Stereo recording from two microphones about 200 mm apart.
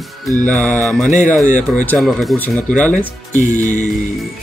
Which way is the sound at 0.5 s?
5° left (ahead or behind).